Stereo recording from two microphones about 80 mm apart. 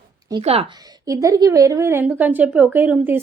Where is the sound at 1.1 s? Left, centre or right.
Right.